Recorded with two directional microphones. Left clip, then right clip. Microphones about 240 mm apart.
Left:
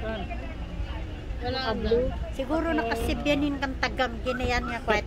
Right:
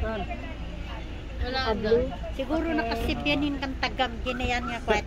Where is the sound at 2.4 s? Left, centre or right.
Centre.